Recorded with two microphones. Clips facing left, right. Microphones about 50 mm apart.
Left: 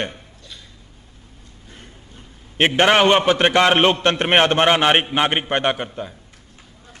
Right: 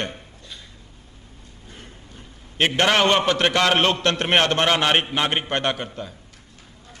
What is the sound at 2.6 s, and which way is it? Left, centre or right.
A man's voice, left.